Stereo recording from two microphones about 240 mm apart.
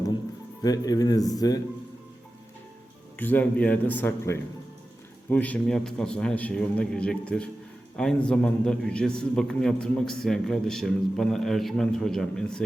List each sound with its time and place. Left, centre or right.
0.6 s speech: centre
3.2 s a man's voice: centre